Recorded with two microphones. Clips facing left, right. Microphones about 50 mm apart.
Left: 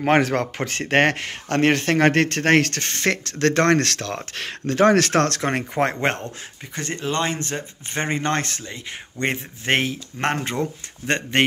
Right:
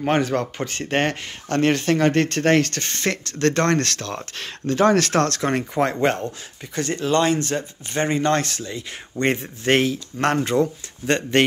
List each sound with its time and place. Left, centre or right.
0.0 s speech: left
2.6 s speech: left
6.7 s speech: centre
8.1 s speech: left